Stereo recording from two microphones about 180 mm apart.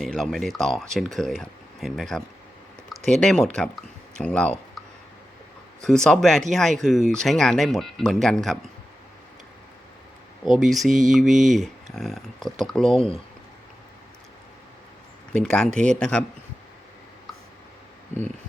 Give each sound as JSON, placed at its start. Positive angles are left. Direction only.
{"t": 0.0, "sound": "speech", "side_deg": 0}
{"t": 5.8, "sound": "speech", "side_deg": 5}
{"t": 10.5, "sound": "speech", "side_deg": 0}
{"t": 12.9, "sound": "speech", "side_deg": 30}
{"t": 15.3, "sound": "speech", "side_deg": 5}